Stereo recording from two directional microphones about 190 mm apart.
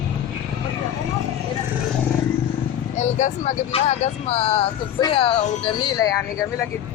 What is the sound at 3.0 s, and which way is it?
Speech, 40° left (ahead or behind).